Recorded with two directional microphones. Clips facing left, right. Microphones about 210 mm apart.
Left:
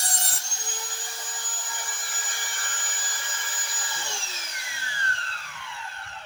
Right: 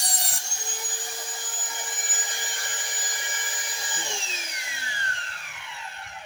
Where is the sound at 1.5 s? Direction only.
20° right (ahead or behind).